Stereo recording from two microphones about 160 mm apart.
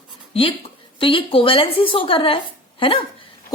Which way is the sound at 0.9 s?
35° left (ahead or behind).